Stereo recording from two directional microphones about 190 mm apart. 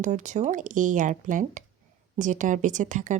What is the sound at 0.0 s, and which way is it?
Speech, 40° right (ahead or behind).